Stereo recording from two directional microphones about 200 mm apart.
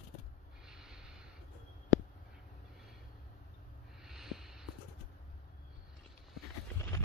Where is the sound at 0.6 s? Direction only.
5° right (ahead or behind).